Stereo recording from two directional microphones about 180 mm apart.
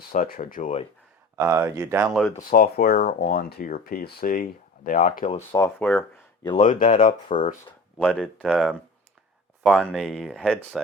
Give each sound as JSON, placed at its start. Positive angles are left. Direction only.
{"t": 0.1, "sound": "speech", "side_deg": 50}
{"t": 1.4, "sound": "speech", "side_deg": -15}
{"t": 2.0, "sound": "speech", "side_deg": -5}
{"t": 2.5, "sound": "speech", "side_deg": 55}
{"t": 5.5, "sound": "speech", "side_deg": 15}
{"t": 6.6, "sound": "speech", "side_deg": 45}
{"t": 7.9, "sound": "speech", "side_deg": 5}